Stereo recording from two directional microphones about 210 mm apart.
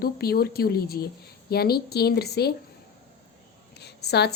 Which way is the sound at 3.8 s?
50° left (ahead or behind).